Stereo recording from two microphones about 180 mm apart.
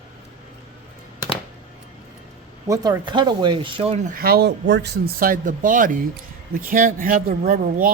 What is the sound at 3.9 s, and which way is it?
Speech, 45° right (ahead or behind).